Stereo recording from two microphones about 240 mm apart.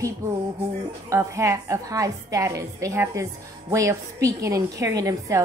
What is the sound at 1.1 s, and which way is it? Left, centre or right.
A woman's voice, centre.